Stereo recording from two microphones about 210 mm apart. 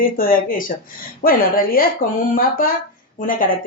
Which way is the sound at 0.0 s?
40° left (ahead or behind).